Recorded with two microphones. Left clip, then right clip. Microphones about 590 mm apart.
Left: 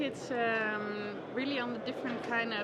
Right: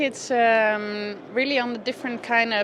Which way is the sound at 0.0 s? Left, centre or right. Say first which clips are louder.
Right 12 dB; right.